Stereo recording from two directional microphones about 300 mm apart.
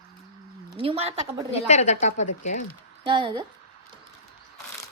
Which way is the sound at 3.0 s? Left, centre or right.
Centre.